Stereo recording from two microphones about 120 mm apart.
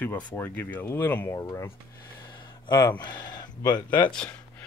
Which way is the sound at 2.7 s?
30° left (ahead or behind).